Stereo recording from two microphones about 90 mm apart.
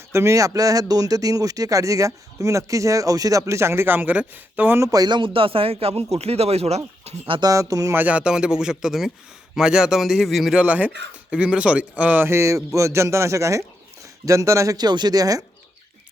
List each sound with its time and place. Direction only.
0.1 s speech: 30° right (ahead or behind)
4.8 s speech: 45° right (ahead or behind); by 6.1 s 90° right
7.4 s speech: 40° right (ahead or behind)
7.9 s a man's voice: 15° right (ahead or behind); by 14.8 s 35° right (ahead or behind)
14.8 s speech: 50° right (ahead or behind)